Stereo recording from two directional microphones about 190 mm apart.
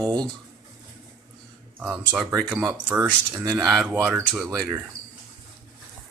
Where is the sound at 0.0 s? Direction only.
20° right (ahead or behind).